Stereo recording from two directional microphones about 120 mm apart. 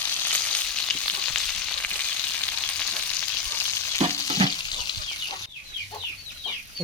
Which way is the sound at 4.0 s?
55° right (ahead or behind).